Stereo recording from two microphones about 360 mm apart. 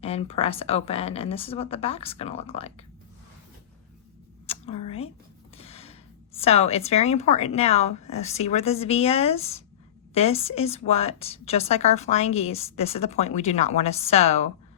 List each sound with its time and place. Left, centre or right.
0.0 s a woman's voice: centre
4.4 s a sound: centre
5.5 s a woman's voice: centre